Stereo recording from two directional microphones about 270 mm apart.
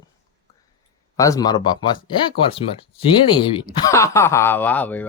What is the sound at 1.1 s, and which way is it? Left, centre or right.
Speech, centre.